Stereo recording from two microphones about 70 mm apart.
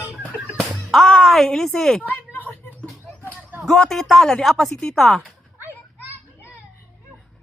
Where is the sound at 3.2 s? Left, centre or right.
Right.